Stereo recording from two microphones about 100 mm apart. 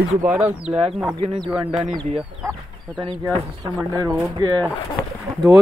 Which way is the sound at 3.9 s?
35° right (ahead or behind).